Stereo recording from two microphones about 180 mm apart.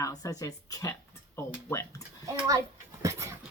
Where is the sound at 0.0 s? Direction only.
20° left (ahead or behind).